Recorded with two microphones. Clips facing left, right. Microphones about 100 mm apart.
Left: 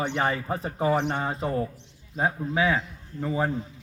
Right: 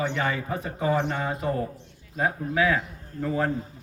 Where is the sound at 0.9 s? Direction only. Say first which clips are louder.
Even; 20° left (ahead or behind).